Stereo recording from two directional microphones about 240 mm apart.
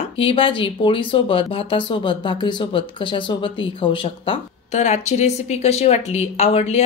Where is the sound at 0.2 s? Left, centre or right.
Left.